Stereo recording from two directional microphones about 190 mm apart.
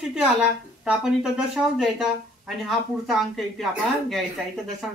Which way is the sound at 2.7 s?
Centre (ahead or behind).